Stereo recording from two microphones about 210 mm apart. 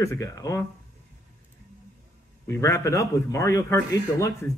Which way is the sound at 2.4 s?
15° left (ahead or behind).